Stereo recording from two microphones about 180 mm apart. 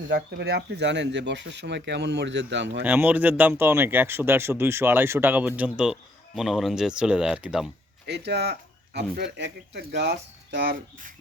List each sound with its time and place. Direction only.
0.1 s speech: 65° right (ahead or behind)
2.8 s speech: 10° right (ahead or behind)
8.0 s speech: 70° right (ahead or behind); by 11.1 s 55° right (ahead or behind)